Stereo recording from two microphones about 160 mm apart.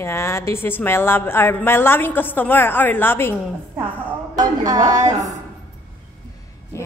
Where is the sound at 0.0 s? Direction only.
15° left (ahead or behind).